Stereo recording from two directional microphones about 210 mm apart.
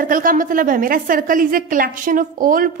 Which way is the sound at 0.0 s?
40° right (ahead or behind).